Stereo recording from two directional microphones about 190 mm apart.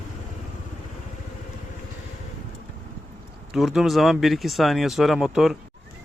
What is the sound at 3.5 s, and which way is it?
Speech, centre (ahead or behind).